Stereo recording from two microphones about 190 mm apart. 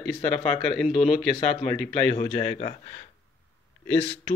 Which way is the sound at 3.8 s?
5° left (ahead or behind).